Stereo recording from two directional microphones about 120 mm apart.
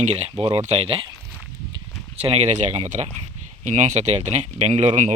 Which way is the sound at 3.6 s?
90° right.